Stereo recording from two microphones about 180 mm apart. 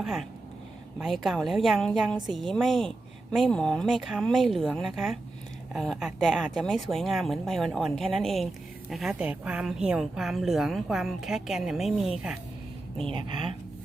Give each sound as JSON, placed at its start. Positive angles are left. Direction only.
{"t": 0.0, "sound": "speech", "side_deg": 0}
{"t": 13.0, "sound": "speech", "side_deg": -30}